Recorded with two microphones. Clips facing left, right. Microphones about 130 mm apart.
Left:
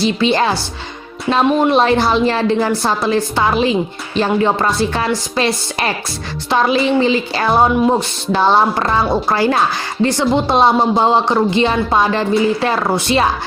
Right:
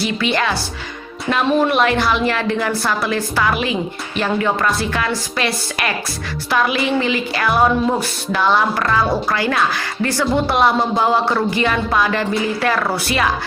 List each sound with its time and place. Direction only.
0.0 s speech: 30° left (ahead or behind)
1.6 s speech: 30° left (ahead or behind)